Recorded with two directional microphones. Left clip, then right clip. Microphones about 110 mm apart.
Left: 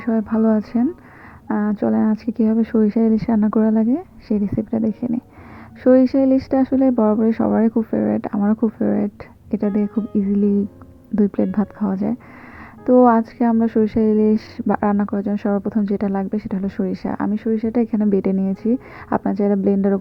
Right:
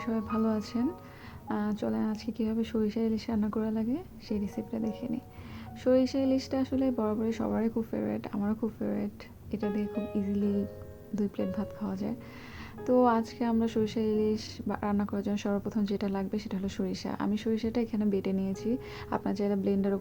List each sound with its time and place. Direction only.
0.3 s speech: 70° left (ahead or behind)
3.3 s speech: 60° left (ahead or behind)
4.9 s speech: 90° left; by 9.0 s 50° left (ahead or behind)
9.6 s speech: 40° left (ahead or behind)
11.1 s speech: 85° left
12.8 s speech: 65° left (ahead or behind); by 14.8 s 80° left
14.8 s speech: 50° left (ahead or behind)
17.2 s speech: 45° left (ahead or behind); by 19.9 s 65° left (ahead or behind)